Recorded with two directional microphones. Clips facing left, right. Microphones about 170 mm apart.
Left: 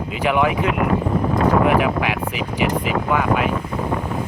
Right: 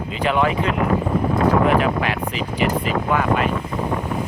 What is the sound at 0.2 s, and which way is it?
Speech, 15° left (ahead or behind).